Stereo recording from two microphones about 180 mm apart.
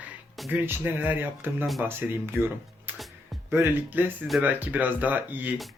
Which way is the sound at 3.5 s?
15° right (ahead or behind).